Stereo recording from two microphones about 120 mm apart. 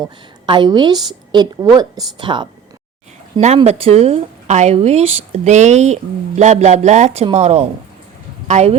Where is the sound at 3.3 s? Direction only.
65° right (ahead or behind).